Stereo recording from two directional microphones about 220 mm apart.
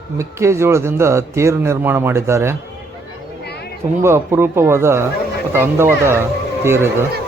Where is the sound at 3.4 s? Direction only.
50° left (ahead or behind).